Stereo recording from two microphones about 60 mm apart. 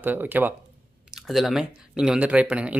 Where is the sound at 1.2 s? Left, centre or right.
Centre.